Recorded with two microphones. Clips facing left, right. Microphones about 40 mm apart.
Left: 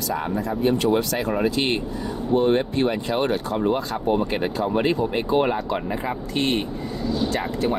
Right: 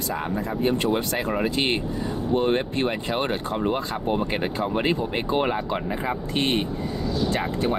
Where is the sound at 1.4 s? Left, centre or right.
Right.